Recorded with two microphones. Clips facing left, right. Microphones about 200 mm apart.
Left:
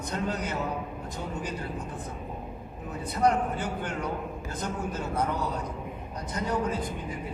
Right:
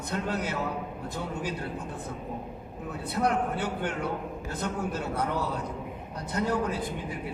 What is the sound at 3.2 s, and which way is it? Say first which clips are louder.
A man's voice: left 3 dB; 65° right (ahead or behind).